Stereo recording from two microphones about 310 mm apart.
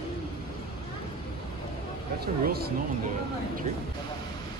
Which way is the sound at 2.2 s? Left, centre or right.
Right.